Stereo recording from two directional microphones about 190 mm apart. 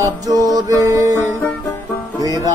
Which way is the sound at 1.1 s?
10° left (ahead or behind).